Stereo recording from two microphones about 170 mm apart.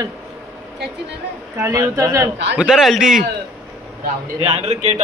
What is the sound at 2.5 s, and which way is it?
Speech, 5° right (ahead or behind).